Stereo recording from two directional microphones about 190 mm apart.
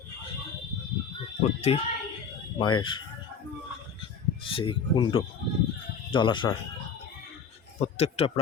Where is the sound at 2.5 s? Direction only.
25° left (ahead or behind).